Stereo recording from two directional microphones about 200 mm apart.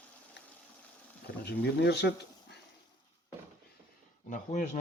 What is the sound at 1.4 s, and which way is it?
Speech, 55° left (ahead or behind).